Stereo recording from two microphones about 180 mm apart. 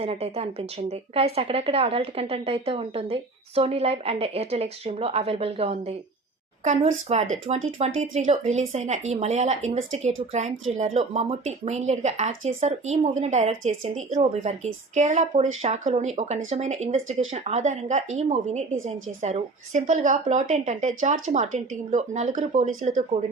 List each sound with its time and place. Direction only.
0.0 s speech: 35° right (ahead or behind)